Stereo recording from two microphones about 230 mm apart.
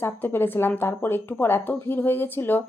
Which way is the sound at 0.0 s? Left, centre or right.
Centre.